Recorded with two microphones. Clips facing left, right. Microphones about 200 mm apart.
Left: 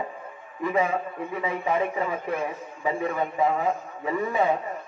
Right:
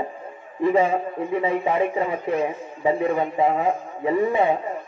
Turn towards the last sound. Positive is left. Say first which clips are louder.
# right 5 dB
turn(degrees=-30)  # may be behind; listen again after turning